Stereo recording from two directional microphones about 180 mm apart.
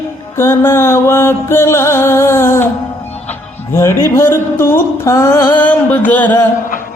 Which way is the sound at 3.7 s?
15° left (ahead or behind).